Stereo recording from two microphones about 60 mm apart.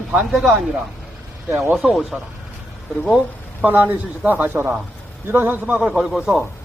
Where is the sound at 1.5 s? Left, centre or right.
Right.